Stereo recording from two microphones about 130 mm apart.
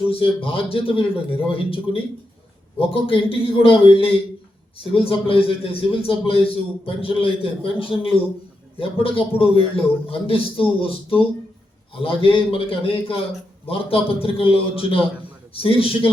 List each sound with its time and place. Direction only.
0.1 s a man's voice: 45° left (ahead or behind)